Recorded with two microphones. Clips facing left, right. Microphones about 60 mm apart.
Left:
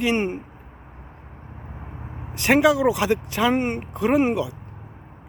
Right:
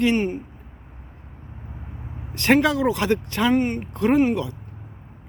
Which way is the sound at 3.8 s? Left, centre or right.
Centre.